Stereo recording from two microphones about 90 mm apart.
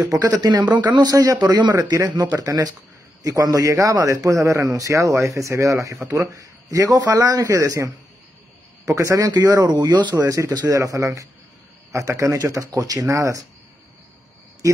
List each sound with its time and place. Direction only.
0.0 s speech: 45° right (ahead or behind)
1.8 s a man's voice: 40° right (ahead or behind)
9.7 s speech: 55° right (ahead or behind)
10.2 s a man's voice: 40° right (ahead or behind)